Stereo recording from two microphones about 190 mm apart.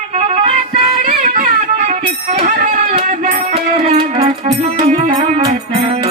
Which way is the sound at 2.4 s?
45° right (ahead or behind).